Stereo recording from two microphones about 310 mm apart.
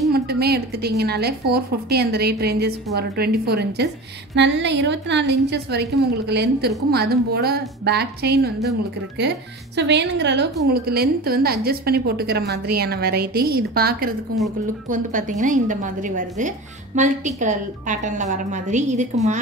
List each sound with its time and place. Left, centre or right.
0.1 s a woman's voice: right
9.8 s a woman's voice: right